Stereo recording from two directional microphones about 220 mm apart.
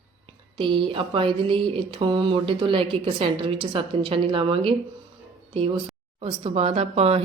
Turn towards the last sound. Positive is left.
turn(degrees=-25)  # may be behind; listen again after turning